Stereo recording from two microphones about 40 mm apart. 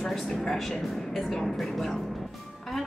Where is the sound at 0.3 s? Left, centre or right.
Centre.